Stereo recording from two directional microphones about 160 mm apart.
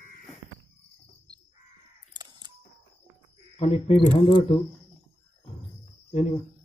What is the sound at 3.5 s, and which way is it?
Speech, 40° left (ahead or behind).